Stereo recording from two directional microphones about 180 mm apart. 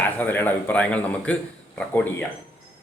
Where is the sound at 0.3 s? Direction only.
10° left (ahead or behind).